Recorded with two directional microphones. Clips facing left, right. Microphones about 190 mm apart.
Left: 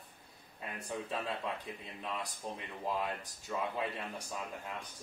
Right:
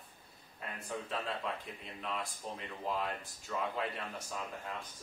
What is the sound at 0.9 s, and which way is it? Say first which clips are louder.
Speech: left 1 dB; 15° left (ahead or behind).